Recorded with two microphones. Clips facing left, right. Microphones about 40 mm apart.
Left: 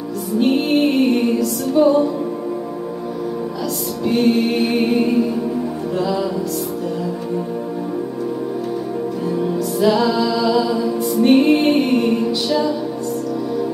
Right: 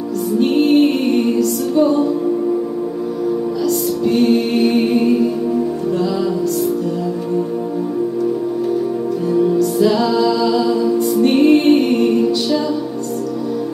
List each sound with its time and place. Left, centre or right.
0.4 s music: centre
4.0 s music: centre
9.3 s music: centre